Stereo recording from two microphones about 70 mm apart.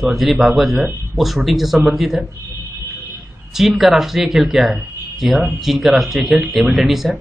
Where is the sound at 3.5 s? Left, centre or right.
Centre.